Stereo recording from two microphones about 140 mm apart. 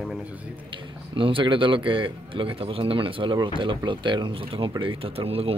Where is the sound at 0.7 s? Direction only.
35° right (ahead or behind).